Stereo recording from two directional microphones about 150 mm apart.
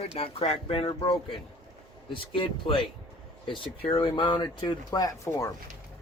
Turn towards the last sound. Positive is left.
turn(degrees=20)  # may be behind; listen again after turning